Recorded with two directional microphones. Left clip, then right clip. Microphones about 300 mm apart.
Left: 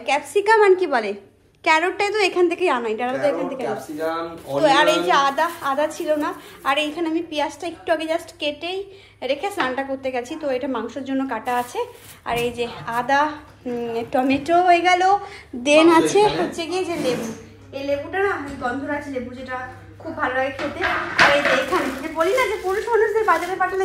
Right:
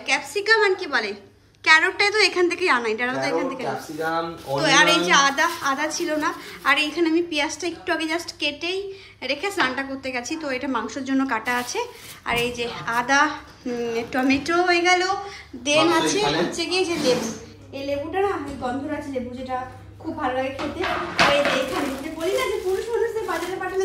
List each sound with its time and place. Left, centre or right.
0.0 s a woman's voice: centre
4.6 s a woman's voice: centre
15.6 s a woman's voice: centre
16.2 s a woman's voice: centre